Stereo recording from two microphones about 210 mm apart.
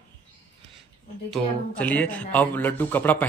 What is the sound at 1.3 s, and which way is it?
Speech, 5° left (ahead or behind).